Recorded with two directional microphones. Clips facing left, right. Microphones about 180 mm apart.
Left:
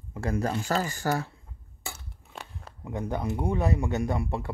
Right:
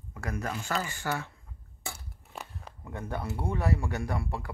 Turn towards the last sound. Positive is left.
turn(degrees=20)  # may be behind; listen again after turning